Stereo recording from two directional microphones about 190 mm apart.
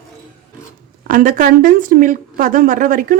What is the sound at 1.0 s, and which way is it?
Speech, 45° right (ahead or behind).